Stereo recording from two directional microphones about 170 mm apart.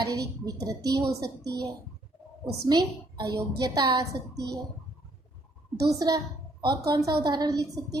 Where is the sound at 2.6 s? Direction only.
25° right (ahead or behind).